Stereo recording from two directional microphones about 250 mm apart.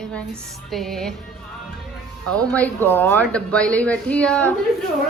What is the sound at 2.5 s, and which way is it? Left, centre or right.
A woman's voice, centre.